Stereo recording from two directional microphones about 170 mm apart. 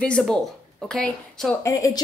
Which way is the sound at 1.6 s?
20° left (ahead or behind).